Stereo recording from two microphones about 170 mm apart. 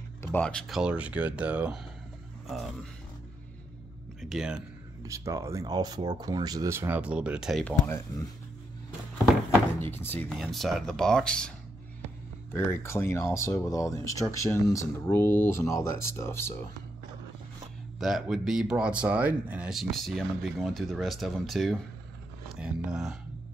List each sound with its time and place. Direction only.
0.2 s speech: 10° left (ahead or behind)
4.2 s speech: centre (ahead or behind)
5.0 s speech: 20° right (ahead or behind)
7.6 s speech: 15° left (ahead or behind)
9.8 s speech: 15° left (ahead or behind)
10.1 s speech: centre (ahead or behind)
17.9 s speech: centre (ahead or behind)